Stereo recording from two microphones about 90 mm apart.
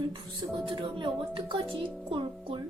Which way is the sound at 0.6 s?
70° right (ahead or behind).